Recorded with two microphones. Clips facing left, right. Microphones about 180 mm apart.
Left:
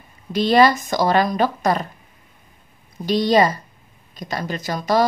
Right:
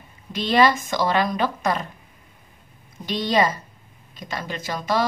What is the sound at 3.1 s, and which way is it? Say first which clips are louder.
Speech: left 5 dB; 40° left (ahead or behind).